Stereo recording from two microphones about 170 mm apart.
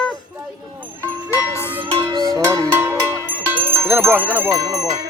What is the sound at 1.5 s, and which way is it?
Music, 15° left (ahead or behind).